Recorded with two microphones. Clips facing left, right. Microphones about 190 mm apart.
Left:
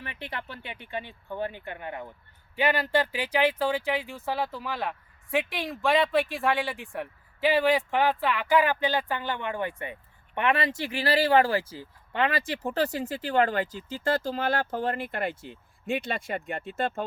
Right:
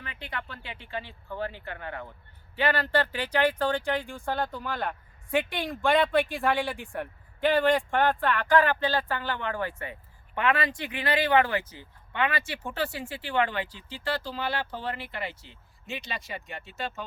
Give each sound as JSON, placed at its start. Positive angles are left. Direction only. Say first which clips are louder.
{"t": 0.0, "sound": "speech", "louder": "left 1 dB", "side_deg": 25}